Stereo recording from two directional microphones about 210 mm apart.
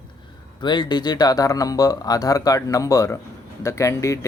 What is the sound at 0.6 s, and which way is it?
Speech, 20° left (ahead or behind).